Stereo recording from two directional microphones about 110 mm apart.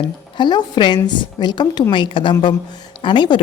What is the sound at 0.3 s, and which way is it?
A woman's voice, 40° left (ahead or behind).